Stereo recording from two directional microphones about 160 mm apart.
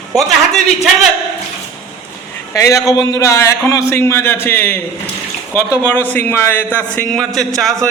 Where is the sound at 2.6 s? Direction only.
20° left (ahead or behind); by 7.8 s centre (ahead or behind).